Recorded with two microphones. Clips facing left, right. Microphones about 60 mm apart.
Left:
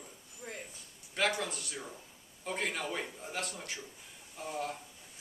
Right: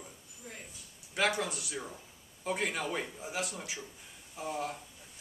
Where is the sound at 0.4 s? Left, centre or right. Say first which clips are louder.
Left 4 dB; left.